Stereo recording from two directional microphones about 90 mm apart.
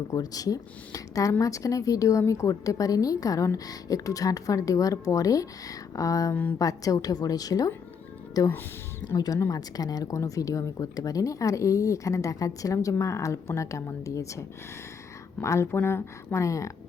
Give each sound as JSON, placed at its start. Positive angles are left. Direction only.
{"t": 0.1, "sound": "speech", "side_deg": 45}
{"t": 6.3, "sound": "speech", "side_deg": 20}
{"t": 6.6, "sound": "a woman's voice", "side_deg": 40}